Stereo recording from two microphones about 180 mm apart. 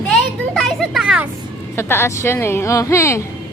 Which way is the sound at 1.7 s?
15° left (ahead or behind).